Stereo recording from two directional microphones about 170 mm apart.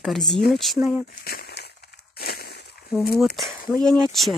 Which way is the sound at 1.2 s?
65° left (ahead or behind).